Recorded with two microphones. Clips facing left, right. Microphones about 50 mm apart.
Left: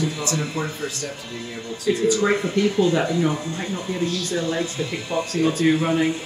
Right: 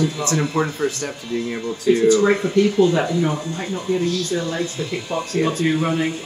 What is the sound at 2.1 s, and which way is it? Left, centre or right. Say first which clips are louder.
Speech: right 4 dB; centre.